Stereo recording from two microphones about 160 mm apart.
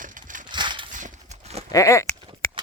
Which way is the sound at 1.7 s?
20° left (ahead or behind).